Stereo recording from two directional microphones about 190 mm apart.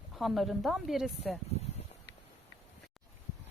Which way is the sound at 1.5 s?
35° left (ahead or behind).